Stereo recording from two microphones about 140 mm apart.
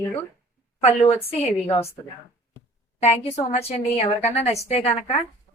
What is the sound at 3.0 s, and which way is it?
A woman's voice, 50° left (ahead or behind).